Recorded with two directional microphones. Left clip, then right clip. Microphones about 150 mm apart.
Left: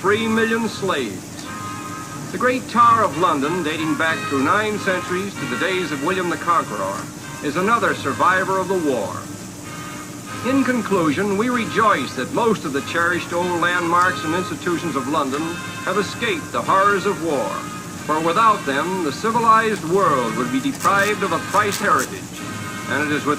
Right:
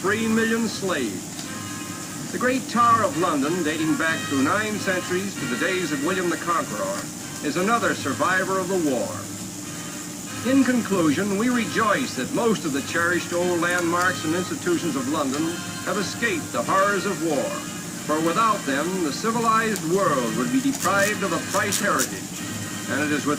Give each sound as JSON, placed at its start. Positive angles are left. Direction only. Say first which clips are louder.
{"t": 0.0, "sound": "speech", "louder": "left 4 dB", "side_deg": 35}
{"t": 2.4, "sound": "speech", "louder": "left 5 dB", "side_deg": 35}
{"t": 10.4, "sound": "speech", "louder": "left 2 dB", "side_deg": 35}
{"t": 16.0, "sound": "speech", "louder": "left 3 dB", "side_deg": 35}